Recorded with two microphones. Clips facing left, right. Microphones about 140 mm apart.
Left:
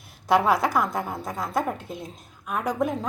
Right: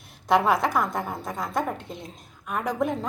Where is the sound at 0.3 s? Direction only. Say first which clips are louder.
Left 1 dB; centre (ahead or behind).